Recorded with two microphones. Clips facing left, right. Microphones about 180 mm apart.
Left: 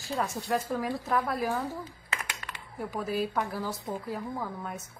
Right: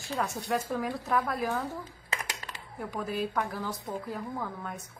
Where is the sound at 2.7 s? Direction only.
5° left (ahead or behind).